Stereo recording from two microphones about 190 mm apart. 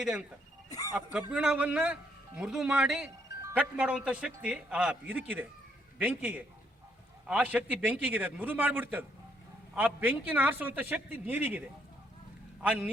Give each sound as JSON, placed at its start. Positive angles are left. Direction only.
{"t": 0.0, "sound": "speech", "side_deg": -5}
{"t": 0.7, "sound": "speech", "side_deg": 20}
{"t": 1.3, "sound": "a man's voice", "side_deg": -5}